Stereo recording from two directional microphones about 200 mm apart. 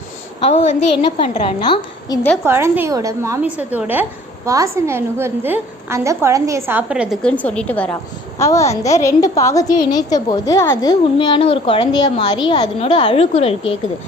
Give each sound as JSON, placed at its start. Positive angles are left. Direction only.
{"t": 0.4, "sound": "a woman's voice", "side_deg": 35}
{"t": 2.4, "sound": "a woman's voice", "side_deg": -10}